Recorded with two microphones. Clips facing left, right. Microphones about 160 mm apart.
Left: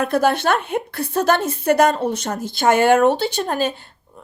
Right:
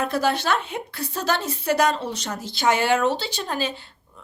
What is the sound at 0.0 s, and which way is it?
A woman's voice, 55° left (ahead or behind).